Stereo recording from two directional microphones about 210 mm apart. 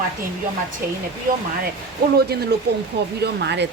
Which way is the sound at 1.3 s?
40° right (ahead or behind).